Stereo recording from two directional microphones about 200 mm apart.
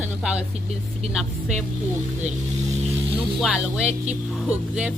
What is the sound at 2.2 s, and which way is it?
Vehicle, 35° right (ahead or behind).